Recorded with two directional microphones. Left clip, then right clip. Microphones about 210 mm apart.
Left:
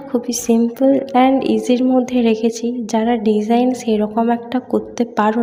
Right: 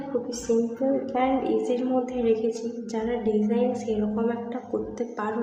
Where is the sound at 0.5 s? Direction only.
50° left (ahead or behind).